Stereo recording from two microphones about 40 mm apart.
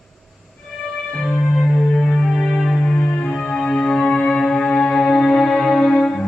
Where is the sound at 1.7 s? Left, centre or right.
Centre.